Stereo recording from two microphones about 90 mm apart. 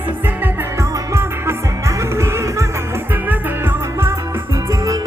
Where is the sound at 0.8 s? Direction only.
35° right (ahead or behind).